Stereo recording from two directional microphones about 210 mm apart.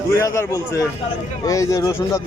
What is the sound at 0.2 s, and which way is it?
Speech, 15° left (ahead or behind).